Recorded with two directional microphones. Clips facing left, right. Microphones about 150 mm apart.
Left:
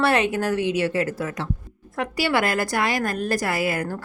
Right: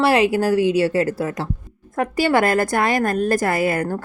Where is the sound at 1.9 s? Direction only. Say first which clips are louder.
Right 5 dB; 50° right (ahead or behind).